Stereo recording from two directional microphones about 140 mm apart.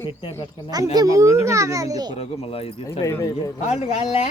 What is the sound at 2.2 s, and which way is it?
Speech, 45° left (ahead or behind).